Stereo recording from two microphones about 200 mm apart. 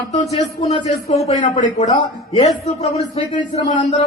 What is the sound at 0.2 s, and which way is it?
A man's voice, 30° left (ahead or behind).